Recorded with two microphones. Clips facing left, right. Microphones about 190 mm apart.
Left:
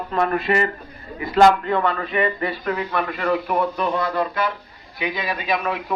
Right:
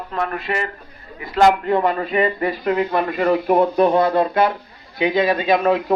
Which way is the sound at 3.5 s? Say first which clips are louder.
Right 7 dB; 50° right (ahead or behind).